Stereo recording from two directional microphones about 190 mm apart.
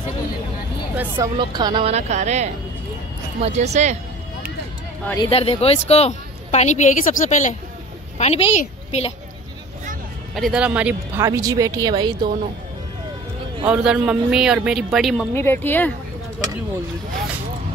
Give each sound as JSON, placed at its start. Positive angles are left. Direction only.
{"t": 1.1, "sound": "speech", "side_deg": -20}
{"t": 5.0, "sound": "speech", "side_deg": 15}
{"t": 5.3, "sound": "a woman's voice", "side_deg": 30}
{"t": 10.3, "sound": "speech", "side_deg": 0}
{"t": 13.7, "sound": "a man's voice", "side_deg": -5}
{"t": 15.3, "sound": "speech", "side_deg": 10}